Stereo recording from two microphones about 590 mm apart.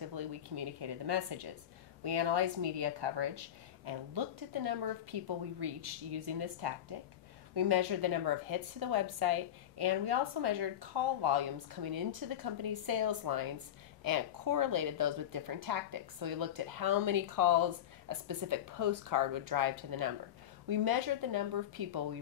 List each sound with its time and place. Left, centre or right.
0.0 s a woman's voice: right
5.7 s speech: right
6.2 s a woman's voice: right